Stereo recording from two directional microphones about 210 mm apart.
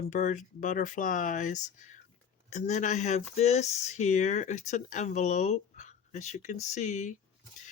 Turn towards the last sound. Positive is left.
turn(degrees=35)  # may be behind; listen again after turning